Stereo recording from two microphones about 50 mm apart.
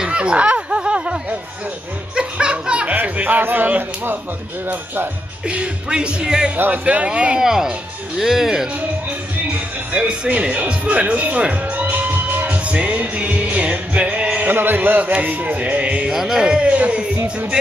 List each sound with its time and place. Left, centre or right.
0.0 s a sound: right
2.1 s music: centre
2.9 s speech: right
5.5 s speech: centre
6.5 s speech: right
6.8 s speech: right
7.3 s speech: centre
9.5 s music: right
12.6 s music: right
14.5 s a sound: right
15.2 s speech: right
16.1 s speech: centre; by 17.0 s right